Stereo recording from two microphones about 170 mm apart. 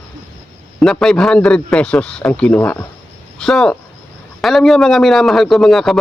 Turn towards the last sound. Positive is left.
turn(degrees=0)  # may be behind; listen again after turning